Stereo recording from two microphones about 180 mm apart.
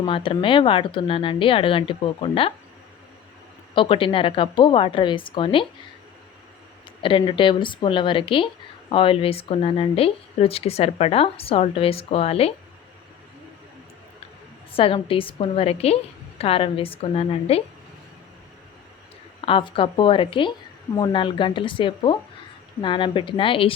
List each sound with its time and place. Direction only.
0.0 s speech: 30° left (ahead or behind)
3.8 s speech: 30° left (ahead or behind)
7.0 s speech: 30° left (ahead or behind)
14.7 s speech: 30° left (ahead or behind)
19.5 s speech: 30° left (ahead or behind)